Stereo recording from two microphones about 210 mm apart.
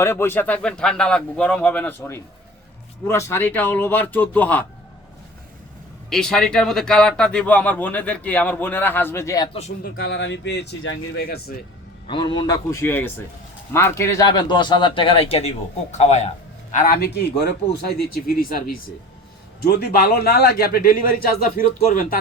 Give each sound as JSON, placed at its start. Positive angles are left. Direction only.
{"t": 0.0, "sound": "speech", "side_deg": 10}
{"t": 6.1, "sound": "speech", "side_deg": 0}
{"t": 9.8, "sound": "a man's voice", "side_deg": 50}
{"t": 12.0, "sound": "a man's voice", "side_deg": 25}
{"t": 16.7, "sound": "a man's voice", "side_deg": 45}